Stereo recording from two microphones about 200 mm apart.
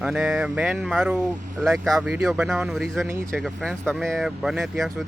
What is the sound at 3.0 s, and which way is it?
Speech, 10° right (ahead or behind).